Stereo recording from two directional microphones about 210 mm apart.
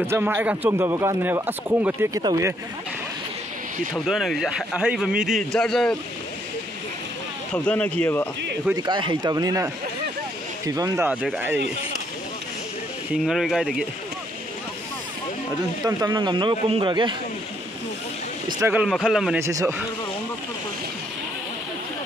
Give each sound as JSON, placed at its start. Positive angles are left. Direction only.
{"t": 0.0, "sound": "speech", "side_deg": -10}
{"t": 3.9, "sound": "a man's voice", "side_deg": 0}
{"t": 7.5, "sound": "speech", "side_deg": 5}
{"t": 8.7, "sound": "speech", "side_deg": -20}
{"t": 10.7, "sound": "speech", "side_deg": -15}
{"t": 13.1, "sound": "a man's voice", "side_deg": 0}
{"t": 15.8, "sound": "speech", "side_deg": -20}
{"t": 18.5, "sound": "a man's voice", "side_deg": -10}
{"t": 19.4, "sound": "speech", "side_deg": -15}